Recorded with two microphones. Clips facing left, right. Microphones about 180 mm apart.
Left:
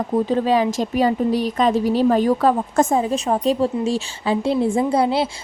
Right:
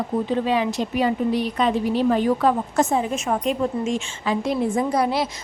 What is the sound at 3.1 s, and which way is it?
A woman's voice, 35° left (ahead or behind).